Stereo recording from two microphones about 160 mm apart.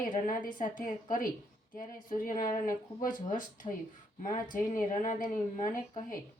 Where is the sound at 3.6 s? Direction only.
30° left (ahead or behind).